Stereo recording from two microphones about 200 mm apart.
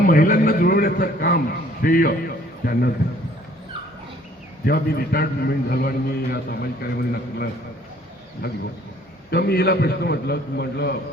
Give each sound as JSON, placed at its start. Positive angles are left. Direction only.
{"t": 0.1, "sound": "a man's voice", "side_deg": 45}
{"t": 4.6, "sound": "a man's voice", "side_deg": 50}
{"t": 9.3, "sound": "a man's voice", "side_deg": 55}